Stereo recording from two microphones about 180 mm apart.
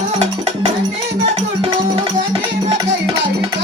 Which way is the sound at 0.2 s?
35° right (ahead or behind).